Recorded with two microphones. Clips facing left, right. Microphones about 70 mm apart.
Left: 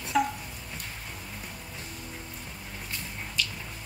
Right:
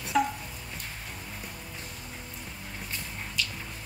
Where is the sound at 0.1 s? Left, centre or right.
Centre.